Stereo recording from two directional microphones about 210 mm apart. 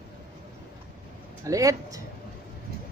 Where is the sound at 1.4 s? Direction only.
15° right (ahead or behind).